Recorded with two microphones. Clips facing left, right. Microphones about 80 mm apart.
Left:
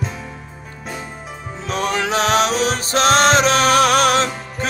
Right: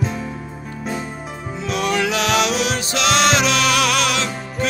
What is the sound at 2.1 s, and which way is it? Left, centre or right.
Music, left.